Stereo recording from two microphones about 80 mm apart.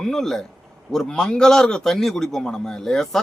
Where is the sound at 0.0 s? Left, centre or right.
Centre.